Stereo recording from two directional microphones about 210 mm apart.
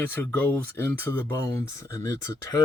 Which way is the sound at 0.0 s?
10° left (ahead or behind).